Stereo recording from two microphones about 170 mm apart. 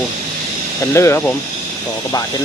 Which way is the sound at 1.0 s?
15° left (ahead or behind).